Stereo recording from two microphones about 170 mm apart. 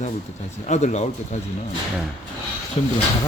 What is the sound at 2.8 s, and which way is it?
Speech, 35° left (ahead or behind).